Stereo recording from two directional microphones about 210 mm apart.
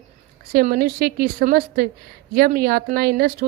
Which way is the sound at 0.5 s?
45° right (ahead or behind).